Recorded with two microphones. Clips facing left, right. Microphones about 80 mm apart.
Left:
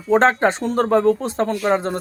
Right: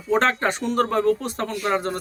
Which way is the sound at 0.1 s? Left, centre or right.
Left.